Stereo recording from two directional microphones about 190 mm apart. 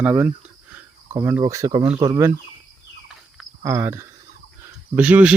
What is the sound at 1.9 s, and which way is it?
Speech, 30° right (ahead or behind).